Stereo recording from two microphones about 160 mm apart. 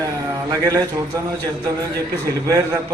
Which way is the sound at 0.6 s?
20° right (ahead or behind).